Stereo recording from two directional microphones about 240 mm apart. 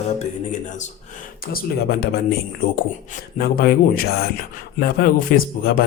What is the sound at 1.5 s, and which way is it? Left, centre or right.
Speech, left.